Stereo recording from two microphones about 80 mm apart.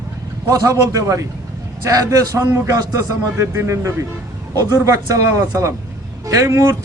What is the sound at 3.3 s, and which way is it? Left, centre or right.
A man's voice, right.